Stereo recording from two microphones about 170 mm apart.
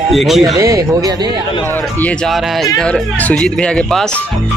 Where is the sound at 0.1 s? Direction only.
Centre (ahead or behind).